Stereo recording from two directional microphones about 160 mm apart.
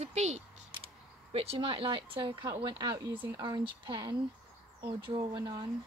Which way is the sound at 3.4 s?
30° right (ahead or behind).